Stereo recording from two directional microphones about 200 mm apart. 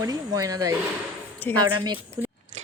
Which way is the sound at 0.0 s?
15° right (ahead or behind).